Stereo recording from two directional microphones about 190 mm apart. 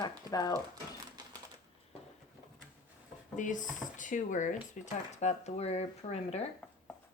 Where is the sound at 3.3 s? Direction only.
40° left (ahead or behind).